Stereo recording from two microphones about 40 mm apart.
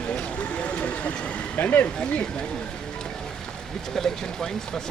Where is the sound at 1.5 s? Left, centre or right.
Left.